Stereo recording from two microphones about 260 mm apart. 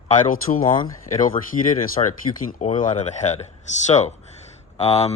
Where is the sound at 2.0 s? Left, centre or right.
Left.